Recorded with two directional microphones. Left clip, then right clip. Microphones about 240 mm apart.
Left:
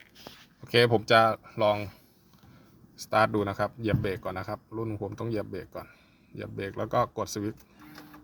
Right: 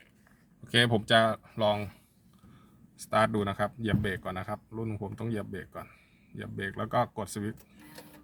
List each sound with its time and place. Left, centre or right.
0.6 s speech: centre
3.1 s speech: centre